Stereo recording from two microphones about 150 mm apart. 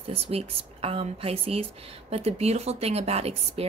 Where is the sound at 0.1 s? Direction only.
40° right (ahead or behind).